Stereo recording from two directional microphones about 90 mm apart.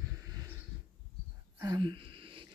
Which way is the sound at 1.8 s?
65° right (ahead or behind).